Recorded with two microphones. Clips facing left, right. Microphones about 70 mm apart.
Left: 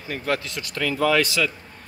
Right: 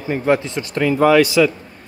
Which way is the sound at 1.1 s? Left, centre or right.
Centre.